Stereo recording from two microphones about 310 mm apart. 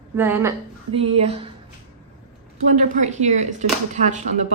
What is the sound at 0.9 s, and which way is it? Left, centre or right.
Speech, centre.